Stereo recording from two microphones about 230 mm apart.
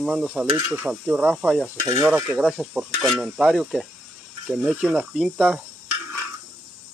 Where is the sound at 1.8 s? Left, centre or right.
Centre.